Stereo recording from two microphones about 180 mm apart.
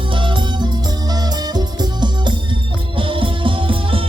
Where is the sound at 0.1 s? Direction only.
25° right (ahead or behind).